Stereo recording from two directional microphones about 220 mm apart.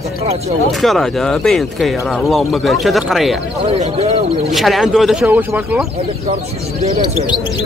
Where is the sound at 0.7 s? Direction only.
Centre (ahead or behind).